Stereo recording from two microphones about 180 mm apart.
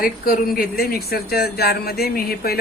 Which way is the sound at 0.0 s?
55° left (ahead or behind).